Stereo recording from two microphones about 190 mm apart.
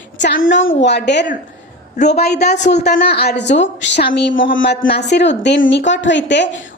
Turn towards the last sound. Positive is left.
turn(degrees=65)  # may be behind; listen again after turning